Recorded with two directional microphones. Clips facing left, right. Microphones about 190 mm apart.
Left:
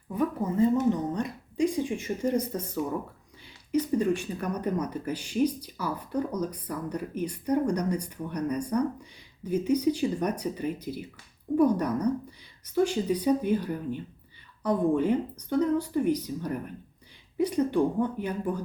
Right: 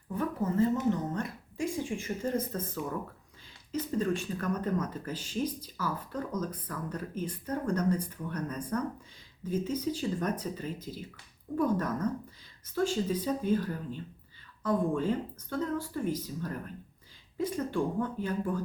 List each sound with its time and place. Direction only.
0.1 s a woman's voice: 15° left (ahead or behind)
3.7 s speech: 15° left (ahead or behind)